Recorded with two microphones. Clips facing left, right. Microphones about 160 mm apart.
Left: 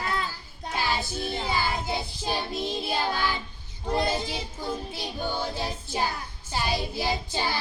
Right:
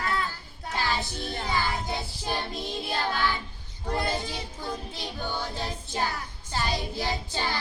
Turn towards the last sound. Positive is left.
turn(degrees=10)  # may be behind; listen again after turning